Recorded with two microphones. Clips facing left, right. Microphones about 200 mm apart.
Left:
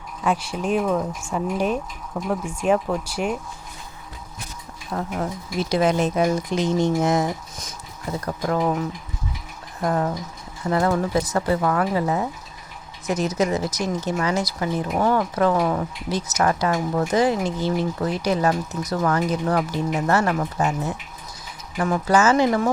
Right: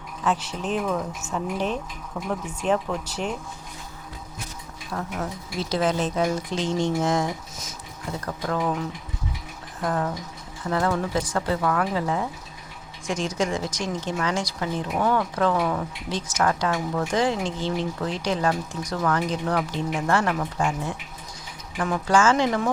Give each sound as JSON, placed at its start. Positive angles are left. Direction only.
{"t": 0.3, "sound": "speech", "side_deg": 10}
{"t": 4.9, "sound": "speech", "side_deg": 20}
{"t": 9.8, "sound": "speech", "side_deg": 15}
{"t": 21.8, "sound": "speech", "side_deg": 10}